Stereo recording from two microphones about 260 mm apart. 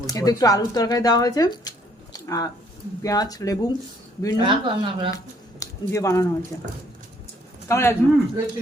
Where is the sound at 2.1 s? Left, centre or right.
Centre.